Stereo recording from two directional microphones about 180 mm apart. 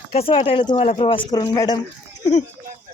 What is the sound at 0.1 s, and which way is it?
Speech, 30° left (ahead or behind).